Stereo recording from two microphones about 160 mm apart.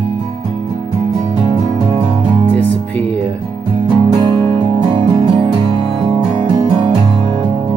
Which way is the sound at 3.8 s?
25° right (ahead or behind).